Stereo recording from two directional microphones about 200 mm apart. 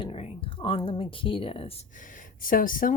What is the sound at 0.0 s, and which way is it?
Speech, 30° left (ahead or behind).